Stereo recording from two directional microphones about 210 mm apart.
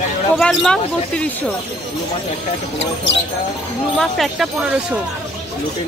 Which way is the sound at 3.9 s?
Centre (ahead or behind).